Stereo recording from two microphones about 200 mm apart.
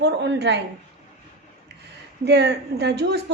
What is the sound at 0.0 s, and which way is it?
Speech, 55° right (ahead or behind).